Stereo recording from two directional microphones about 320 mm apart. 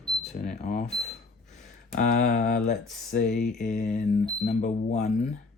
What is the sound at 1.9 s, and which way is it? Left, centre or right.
Speech, left.